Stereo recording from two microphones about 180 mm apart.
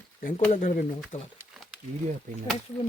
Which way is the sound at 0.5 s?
50° left (ahead or behind).